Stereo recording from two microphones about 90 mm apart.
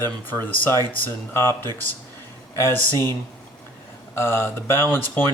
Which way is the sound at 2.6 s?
30° left (ahead or behind).